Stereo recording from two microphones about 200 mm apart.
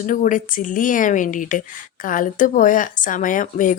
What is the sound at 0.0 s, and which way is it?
Speech, 40° left (ahead or behind).